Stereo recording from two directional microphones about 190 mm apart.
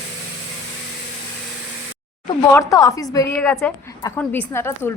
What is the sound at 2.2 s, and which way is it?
A woman's voice, 15° left (ahead or behind).